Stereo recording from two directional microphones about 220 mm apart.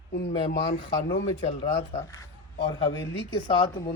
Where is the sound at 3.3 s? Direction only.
20° left (ahead or behind).